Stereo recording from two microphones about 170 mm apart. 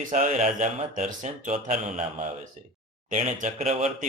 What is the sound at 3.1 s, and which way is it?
Speech, 45° right (ahead or behind).